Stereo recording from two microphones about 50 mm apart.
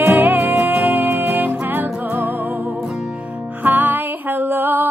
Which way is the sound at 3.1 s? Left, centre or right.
Right.